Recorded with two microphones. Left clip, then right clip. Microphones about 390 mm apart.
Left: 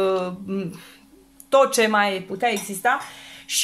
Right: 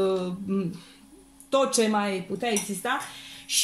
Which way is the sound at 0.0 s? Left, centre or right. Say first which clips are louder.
Left 4 dB; centre.